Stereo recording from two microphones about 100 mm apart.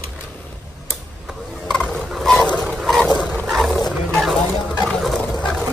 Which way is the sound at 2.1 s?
5° left (ahead or behind).